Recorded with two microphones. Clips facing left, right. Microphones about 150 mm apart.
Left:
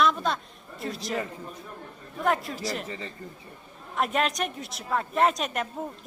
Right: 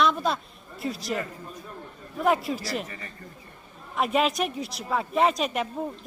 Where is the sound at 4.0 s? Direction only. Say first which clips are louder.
Right 2 dB; 5° right (ahead or behind).